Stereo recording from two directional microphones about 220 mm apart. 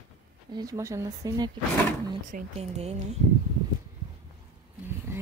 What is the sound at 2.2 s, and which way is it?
Speech, 30° right (ahead or behind).